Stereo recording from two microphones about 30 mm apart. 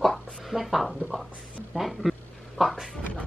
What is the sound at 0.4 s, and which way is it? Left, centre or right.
Speech, centre.